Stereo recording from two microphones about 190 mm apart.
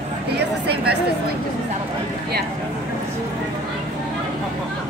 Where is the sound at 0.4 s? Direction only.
60° right (ahead or behind).